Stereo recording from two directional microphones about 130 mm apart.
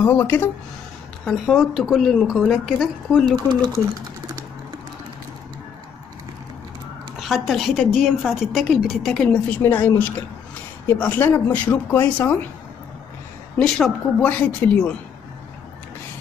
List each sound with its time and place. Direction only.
0.0 s speech: 15° left (ahead or behind)
1.2 s a woman's voice: centre (ahead or behind)
7.2 s a woman's voice: centre (ahead or behind)
9.6 s speech: 15° left (ahead or behind)
13.6 s speech: 5° left (ahead or behind)